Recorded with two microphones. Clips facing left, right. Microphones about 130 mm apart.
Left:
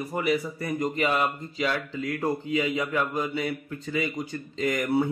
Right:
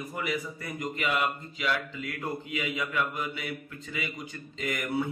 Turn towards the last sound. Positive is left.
turn(degrees=35)  # may be behind; listen again after turning